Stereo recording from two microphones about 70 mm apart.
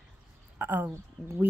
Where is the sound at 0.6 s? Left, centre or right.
Right.